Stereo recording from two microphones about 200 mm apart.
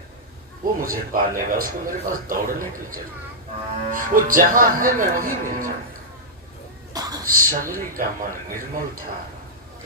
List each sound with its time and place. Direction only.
0.6 s speech: 45° right (ahead or behind)
6.9 s a sound: 20° right (ahead or behind)
7.3 s speech: 45° right (ahead or behind)